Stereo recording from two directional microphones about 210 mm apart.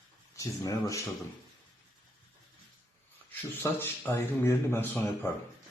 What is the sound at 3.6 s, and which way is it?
A man's voice, 10° left (ahead or behind).